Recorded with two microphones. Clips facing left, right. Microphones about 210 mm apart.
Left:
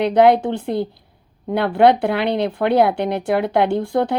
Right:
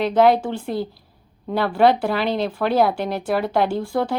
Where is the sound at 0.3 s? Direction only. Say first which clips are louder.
Left 3 dB; 20° left (ahead or behind).